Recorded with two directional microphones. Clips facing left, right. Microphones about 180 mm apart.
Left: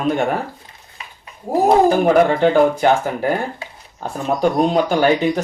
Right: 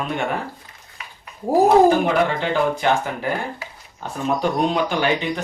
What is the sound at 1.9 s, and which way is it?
Speech, 45° left (ahead or behind).